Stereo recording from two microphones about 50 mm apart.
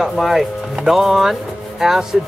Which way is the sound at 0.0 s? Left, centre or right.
Centre.